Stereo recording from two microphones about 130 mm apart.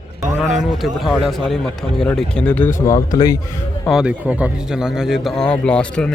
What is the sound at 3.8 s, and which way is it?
A man's voice, 5° right (ahead or behind).